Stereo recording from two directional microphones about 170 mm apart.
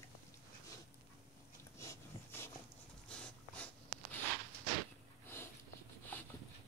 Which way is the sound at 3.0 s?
5° left (ahead or behind).